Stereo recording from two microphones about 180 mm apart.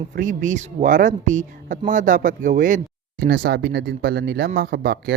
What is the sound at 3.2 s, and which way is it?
Speech, 60° right (ahead or behind).